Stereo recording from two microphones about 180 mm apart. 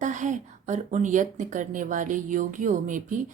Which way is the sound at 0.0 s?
45° right (ahead or behind).